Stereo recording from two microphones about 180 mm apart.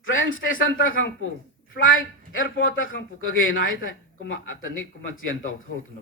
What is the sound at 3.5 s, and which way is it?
Speech, 90° left.